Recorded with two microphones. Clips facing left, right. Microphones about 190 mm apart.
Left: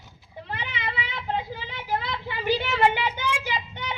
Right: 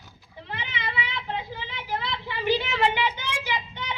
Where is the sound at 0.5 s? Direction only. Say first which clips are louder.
Even; 45° left (ahead or behind).